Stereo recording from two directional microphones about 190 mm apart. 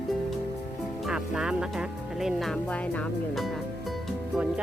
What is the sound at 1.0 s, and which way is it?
Speech, 5° right (ahead or behind).